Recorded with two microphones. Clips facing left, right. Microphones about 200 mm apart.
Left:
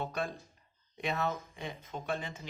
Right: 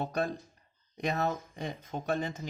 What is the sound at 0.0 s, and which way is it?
Speech, 40° right (ahead or behind).